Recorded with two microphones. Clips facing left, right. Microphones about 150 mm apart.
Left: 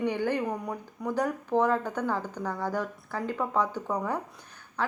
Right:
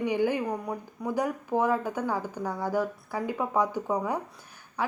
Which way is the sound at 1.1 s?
10° right (ahead or behind).